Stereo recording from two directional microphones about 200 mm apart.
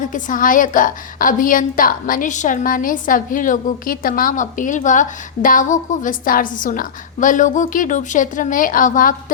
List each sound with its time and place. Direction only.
0.1 s a woman's voice: 40° left (ahead or behind)